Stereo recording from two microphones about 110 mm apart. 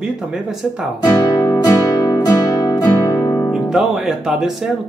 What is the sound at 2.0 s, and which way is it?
Music, 30° left (ahead or behind).